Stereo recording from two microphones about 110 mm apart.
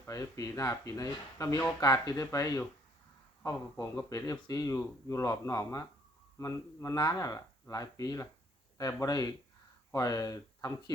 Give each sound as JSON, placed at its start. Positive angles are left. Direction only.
{"t": 0.0, "sound": "speech", "side_deg": 30}